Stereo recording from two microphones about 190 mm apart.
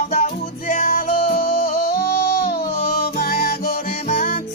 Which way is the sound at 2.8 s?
55° left (ahead or behind).